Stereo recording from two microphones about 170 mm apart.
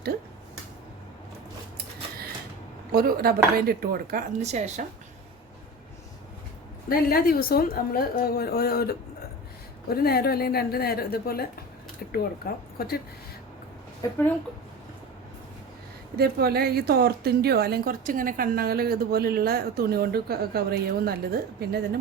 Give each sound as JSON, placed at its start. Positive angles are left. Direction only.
{"t": 2.9, "sound": "a woman's voice", "side_deg": -60}
{"t": 6.8, "sound": "a woman's voice", "side_deg": 60}
{"t": 12.4, "sound": "a woman's voice", "side_deg": 65}
{"t": 16.1, "sound": "a woman's voice", "side_deg": -65}